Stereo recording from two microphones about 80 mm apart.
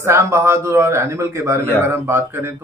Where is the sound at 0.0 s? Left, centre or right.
Right.